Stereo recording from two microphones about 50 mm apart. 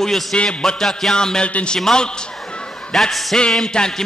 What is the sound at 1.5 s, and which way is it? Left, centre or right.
Speech, left.